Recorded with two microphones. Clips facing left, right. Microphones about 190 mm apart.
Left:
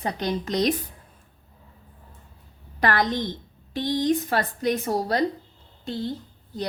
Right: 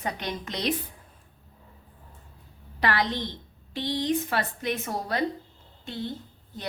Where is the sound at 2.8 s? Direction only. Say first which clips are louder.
Left 4 dB; 45° left (ahead or behind).